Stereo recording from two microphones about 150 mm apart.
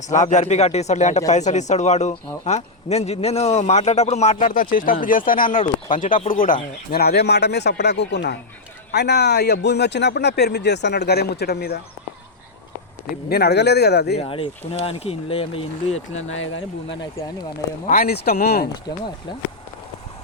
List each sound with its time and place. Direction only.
0.1 s a man's voice: 55° left (ahead or behind)
6.9 s a man's voice: 90° left
13.1 s a man's voice: 90° left
14.2 s speech: 40° left (ahead or behind)
17.8 s a man's voice: 80° left